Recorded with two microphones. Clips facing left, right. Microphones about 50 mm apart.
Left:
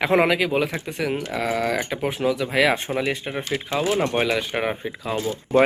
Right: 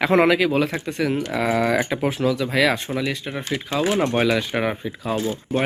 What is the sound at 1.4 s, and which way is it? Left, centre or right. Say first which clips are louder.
Speech: right 4 dB; centre.